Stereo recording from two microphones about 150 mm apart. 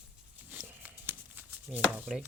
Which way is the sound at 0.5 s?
10° right (ahead or behind).